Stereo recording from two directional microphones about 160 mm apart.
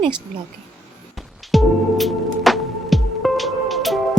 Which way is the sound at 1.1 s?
Centre (ahead or behind).